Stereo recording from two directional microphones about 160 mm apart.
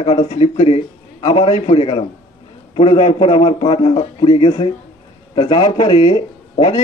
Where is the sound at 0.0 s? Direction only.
45° left (ahead or behind).